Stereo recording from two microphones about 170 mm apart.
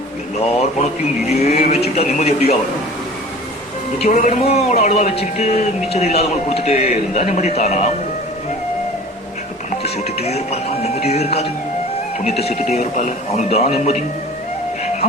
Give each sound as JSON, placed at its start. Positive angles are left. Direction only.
{"t": 0.3, "sound": "speech", "side_deg": 40}
{"t": 1.3, "sound": "vehicle", "side_deg": 40}
{"t": 2.0, "sound": "speech", "side_deg": 40}
{"t": 4.0, "sound": "speech", "side_deg": 45}
{"t": 9.8, "sound": "speech", "side_deg": 35}